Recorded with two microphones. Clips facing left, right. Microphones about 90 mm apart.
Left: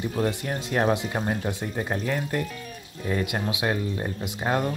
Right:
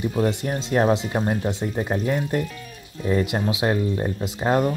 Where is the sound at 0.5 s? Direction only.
25° right (ahead or behind).